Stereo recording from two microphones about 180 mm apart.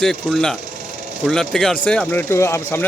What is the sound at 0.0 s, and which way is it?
A man's voice, centre (ahead or behind).